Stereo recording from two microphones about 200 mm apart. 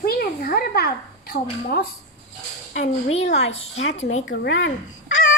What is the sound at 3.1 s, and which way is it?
Speech, 30° left (ahead or behind).